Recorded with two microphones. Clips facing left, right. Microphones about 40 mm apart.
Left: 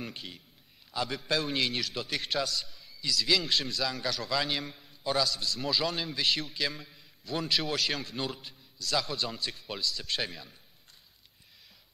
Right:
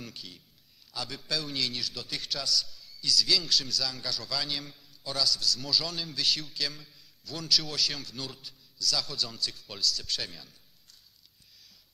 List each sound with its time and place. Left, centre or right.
0.0 s a man's voice: left